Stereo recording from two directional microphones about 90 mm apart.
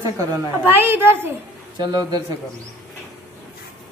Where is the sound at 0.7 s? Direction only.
25° right (ahead or behind).